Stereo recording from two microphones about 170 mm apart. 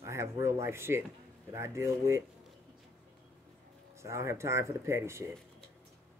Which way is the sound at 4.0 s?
15° right (ahead or behind).